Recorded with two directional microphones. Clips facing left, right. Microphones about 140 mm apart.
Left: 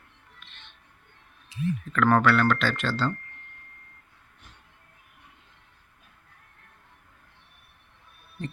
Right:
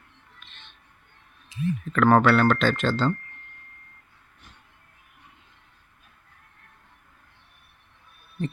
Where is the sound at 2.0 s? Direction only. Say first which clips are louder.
Right 3 dB; 25° right (ahead or behind).